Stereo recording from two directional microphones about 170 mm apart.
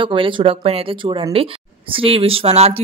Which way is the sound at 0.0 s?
30° right (ahead or behind).